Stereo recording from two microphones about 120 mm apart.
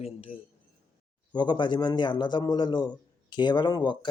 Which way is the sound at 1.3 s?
40° left (ahead or behind).